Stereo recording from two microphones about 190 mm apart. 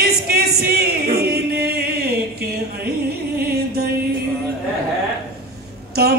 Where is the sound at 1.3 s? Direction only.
55° right (ahead or behind).